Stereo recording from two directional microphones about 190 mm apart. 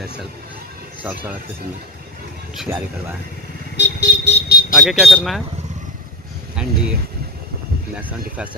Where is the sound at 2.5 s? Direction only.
5° right (ahead or behind).